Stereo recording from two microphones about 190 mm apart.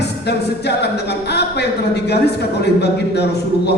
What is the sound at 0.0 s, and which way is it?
A capella, 60° left (ahead or behind).